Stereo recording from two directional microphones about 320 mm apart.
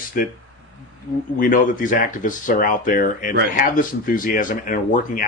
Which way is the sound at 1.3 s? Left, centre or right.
Left.